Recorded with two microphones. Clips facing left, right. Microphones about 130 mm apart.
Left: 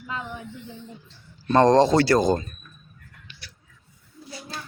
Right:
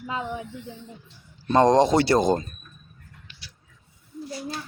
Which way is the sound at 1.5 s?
15° right (ahead or behind).